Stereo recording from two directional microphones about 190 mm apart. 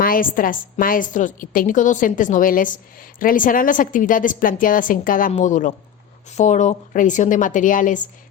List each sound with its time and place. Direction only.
0.0 s a woman's voice: 50° left (ahead or behind)